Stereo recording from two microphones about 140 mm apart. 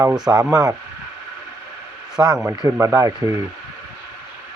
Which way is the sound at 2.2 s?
10° right (ahead or behind).